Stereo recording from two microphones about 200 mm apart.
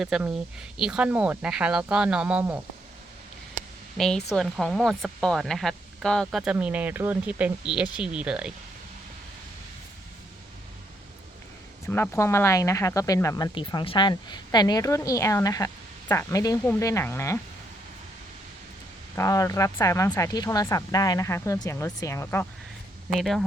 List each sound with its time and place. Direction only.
0.0 s speech: 5° right (ahead or behind)
3.9 s speech: centre (ahead or behind)
11.9 s speech: 10° left (ahead or behind)
19.1 s speech: 15° left (ahead or behind)